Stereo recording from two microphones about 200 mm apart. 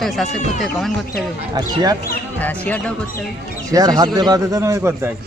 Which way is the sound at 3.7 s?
20° right (ahead or behind).